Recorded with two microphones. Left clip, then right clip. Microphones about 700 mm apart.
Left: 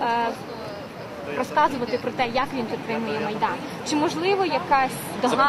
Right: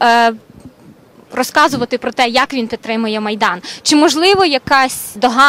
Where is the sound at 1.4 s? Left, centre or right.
Right.